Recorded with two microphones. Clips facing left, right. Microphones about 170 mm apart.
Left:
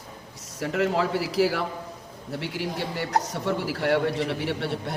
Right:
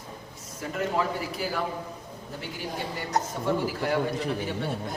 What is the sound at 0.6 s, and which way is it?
Speech, 80° left.